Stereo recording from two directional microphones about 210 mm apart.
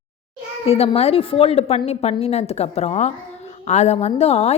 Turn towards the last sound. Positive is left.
turn(degrees=30)  # may be behind; listen again after turning